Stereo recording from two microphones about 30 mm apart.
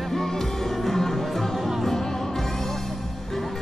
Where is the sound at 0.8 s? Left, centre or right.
Centre.